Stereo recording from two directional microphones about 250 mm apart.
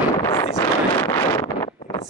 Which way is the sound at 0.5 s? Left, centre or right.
Centre.